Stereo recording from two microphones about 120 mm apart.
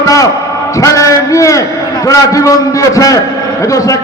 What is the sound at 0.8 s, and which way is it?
A man's voice, 25° left (ahead or behind).